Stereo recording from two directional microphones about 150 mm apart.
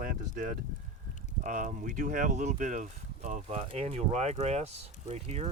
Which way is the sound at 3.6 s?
40° right (ahead or behind).